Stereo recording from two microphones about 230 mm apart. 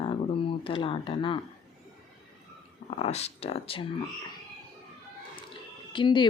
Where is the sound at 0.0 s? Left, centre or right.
Left.